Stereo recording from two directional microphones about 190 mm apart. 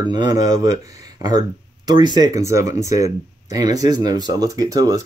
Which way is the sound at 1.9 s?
20° right (ahead or behind).